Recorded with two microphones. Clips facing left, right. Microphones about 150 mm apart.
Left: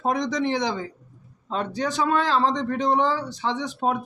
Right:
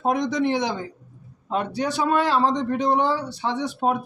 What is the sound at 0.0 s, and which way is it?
A man's voice, 5° right (ahead or behind).